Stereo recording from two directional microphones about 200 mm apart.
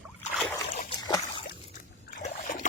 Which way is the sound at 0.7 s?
40° left (ahead or behind).